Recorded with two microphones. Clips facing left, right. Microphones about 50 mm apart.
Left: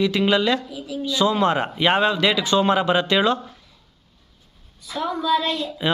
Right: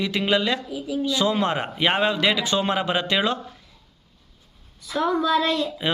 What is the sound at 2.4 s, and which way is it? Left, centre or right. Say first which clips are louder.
A man's voice: left 4 dB; right.